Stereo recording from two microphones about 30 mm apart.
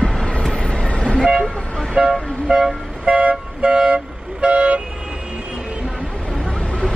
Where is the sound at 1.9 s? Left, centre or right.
Right.